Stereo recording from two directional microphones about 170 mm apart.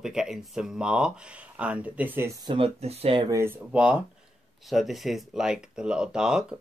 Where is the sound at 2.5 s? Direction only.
35° right (ahead or behind).